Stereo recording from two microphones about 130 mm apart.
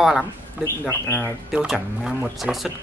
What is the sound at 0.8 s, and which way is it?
Speech, 20° left (ahead or behind).